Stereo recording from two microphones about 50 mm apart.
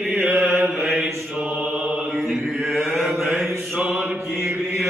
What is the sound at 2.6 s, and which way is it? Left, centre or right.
Chant, centre.